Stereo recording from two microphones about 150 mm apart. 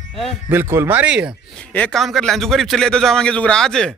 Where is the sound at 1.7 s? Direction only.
5° left (ahead or behind).